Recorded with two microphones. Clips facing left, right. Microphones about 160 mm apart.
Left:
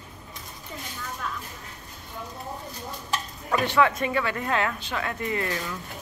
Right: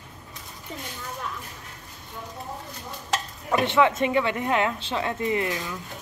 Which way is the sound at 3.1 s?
80° right.